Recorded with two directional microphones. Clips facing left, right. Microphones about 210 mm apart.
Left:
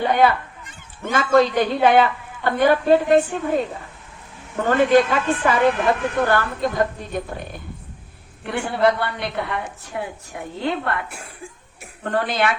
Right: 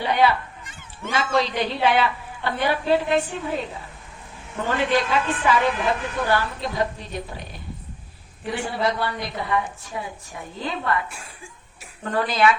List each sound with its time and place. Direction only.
0.0 s a woman's voice: 50° left (ahead or behind)